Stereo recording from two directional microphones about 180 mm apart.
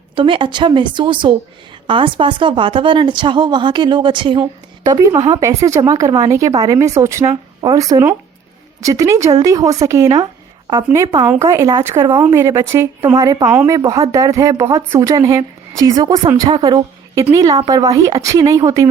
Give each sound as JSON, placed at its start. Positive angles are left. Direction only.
{"t": 0.2, "sound": "a woman's voice", "side_deg": -30}